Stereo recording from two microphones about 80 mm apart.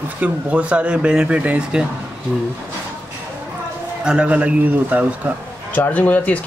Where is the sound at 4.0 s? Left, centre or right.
Centre.